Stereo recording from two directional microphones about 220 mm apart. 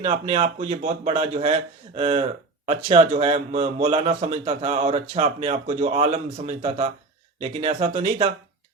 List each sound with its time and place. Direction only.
0.0 s speech: 30° right (ahead or behind)